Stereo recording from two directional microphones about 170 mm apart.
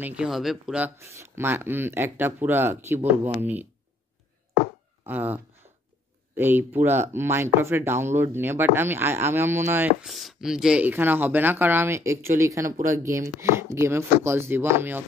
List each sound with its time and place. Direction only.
0.0 s speech: 5° right (ahead or behind)
5.0 s speech: 10° right (ahead or behind)
10.0 s speech: centre (ahead or behind)